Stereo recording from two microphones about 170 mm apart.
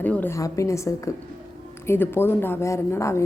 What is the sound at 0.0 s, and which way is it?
Speech, 10° left (ahead or behind).